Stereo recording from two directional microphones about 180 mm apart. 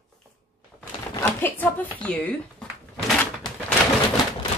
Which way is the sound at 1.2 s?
10° left (ahead or behind).